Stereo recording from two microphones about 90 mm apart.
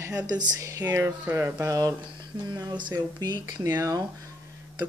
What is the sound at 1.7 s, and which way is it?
Speech, 40° right (ahead or behind).